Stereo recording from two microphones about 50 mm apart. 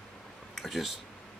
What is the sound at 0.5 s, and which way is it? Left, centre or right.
Speech, centre.